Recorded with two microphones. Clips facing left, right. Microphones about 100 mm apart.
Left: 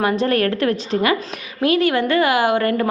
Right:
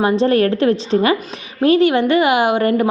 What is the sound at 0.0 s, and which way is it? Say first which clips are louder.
A woman's voice: right 4 dB; 25° right (ahead or behind).